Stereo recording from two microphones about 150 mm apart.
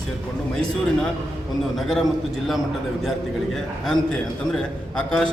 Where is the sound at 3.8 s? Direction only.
5° left (ahead or behind).